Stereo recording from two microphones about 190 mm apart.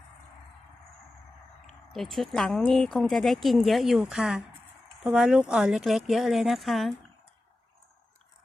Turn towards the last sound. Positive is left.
turn(degrees=0)  # may be behind; listen again after turning